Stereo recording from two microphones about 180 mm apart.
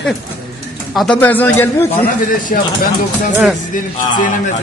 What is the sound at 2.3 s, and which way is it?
Speech, 50° left (ahead or behind).